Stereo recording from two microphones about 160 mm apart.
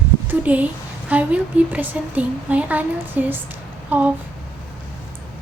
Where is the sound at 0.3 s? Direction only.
10° right (ahead or behind).